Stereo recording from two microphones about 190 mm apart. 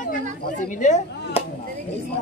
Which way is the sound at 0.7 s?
40° left (ahead or behind).